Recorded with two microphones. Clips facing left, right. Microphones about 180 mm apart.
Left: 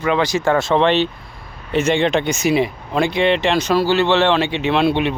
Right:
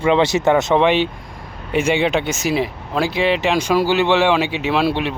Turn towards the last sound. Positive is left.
turn(degrees=-5)  # may be behind; listen again after turning